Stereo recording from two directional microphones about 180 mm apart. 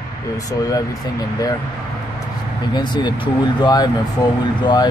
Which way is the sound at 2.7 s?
25° left (ahead or behind).